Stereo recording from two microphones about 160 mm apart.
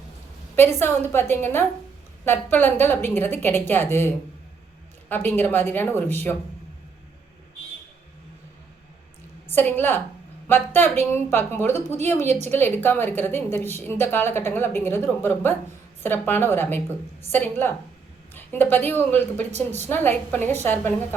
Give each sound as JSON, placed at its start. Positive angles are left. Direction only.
{"t": 0.5, "sound": "a woman's voice", "side_deg": 15}
{"t": 9.5, "sound": "a woman's voice", "side_deg": 10}
{"t": 12.2, "sound": "a woman's voice", "side_deg": -45}
{"t": 12.5, "sound": "a woman's voice", "side_deg": 15}